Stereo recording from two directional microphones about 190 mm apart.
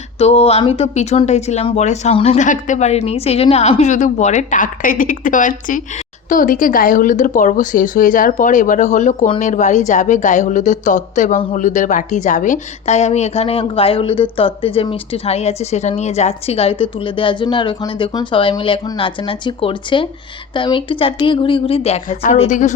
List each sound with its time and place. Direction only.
0.2 s a woman's voice: 30° left (ahead or behind)